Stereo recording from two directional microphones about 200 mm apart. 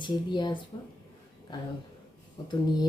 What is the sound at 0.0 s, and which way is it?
Speech, 20° left (ahead or behind).